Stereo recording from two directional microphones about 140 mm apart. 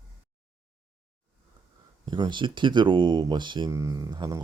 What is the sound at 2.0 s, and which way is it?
Speech, 35° right (ahead or behind).